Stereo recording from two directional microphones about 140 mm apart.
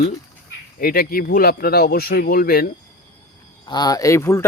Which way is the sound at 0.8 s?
90° left.